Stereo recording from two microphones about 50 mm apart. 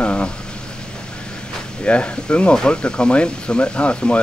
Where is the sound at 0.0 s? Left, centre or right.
Left.